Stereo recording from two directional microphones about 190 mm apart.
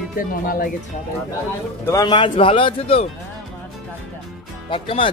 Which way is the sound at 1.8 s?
20° left (ahead or behind).